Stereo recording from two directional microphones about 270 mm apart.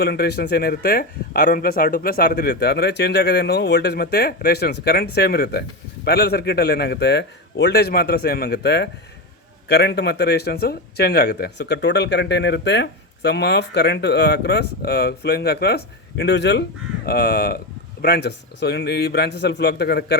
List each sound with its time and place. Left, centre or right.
0.0 s speech: left